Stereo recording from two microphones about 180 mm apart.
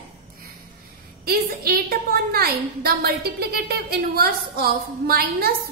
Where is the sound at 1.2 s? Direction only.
60° right (ahead or behind).